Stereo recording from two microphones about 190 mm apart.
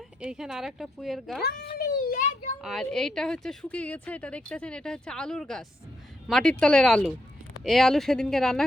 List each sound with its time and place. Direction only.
0.2 s a woman's voice: 5° right (ahead or behind)
1.5 s a sound: 55° left (ahead or behind)
2.6 s a woman's voice: centre (ahead or behind)